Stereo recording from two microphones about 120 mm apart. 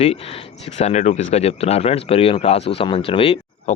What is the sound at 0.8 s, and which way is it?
Speech, 75° left (ahead or behind).